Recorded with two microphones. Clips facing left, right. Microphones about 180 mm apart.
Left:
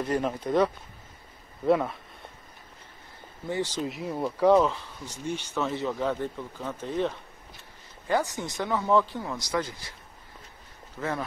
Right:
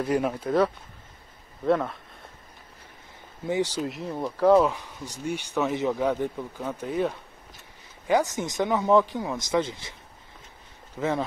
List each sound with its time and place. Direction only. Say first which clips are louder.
0.0 s speech: right 2 dB; 10° right (ahead or behind)
1.7 s speech: even; 5° left (ahead or behind)
3.4 s speech: right 4 dB; 15° right (ahead or behind)
3.8 s speech: even; centre (ahead or behind)
4.6 s speech: right 2 dB; 15° right (ahead or behind)
11.0 s speech: right 5 dB; 20° right (ahead or behind)